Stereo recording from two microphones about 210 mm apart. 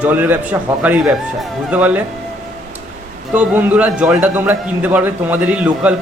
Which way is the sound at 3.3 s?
5° right (ahead or behind).